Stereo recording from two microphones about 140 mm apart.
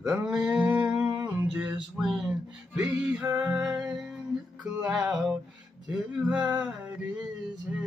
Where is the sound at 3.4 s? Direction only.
5° right (ahead or behind).